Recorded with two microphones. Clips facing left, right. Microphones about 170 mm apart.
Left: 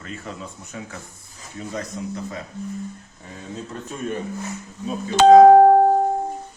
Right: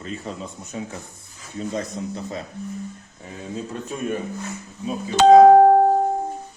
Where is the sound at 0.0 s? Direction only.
20° right (ahead or behind).